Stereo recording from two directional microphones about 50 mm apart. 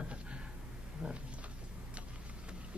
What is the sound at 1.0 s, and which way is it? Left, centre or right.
Speech, centre.